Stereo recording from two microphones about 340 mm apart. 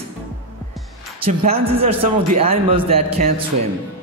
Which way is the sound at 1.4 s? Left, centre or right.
Centre.